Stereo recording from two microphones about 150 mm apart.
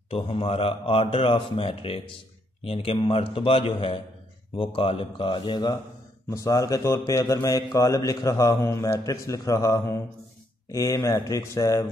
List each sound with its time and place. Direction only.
0.1 s a man's voice: 40° left (ahead or behind); by 11.8 s 20° left (ahead or behind)